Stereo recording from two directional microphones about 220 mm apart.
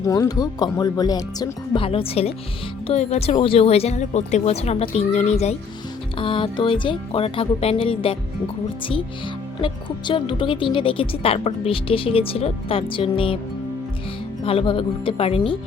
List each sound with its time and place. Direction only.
0.0 s speech: 15° left (ahead or behind)
9.6 s speech: 20° left (ahead or behind)
14.4 s speech: 25° left (ahead or behind)